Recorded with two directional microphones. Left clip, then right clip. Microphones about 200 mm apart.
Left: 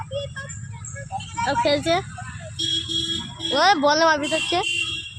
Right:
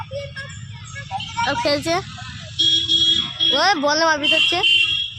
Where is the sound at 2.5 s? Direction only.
55° left (ahead or behind).